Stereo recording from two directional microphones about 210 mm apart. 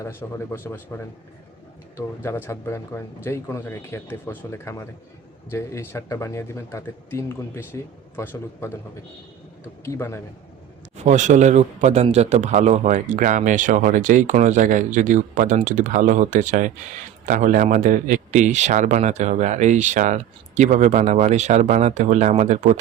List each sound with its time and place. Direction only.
0.0 s speech: 10° left (ahead or behind)
9.8 s speech: 10° left (ahead or behind)
10.9 s a man's voice: 35° right (ahead or behind)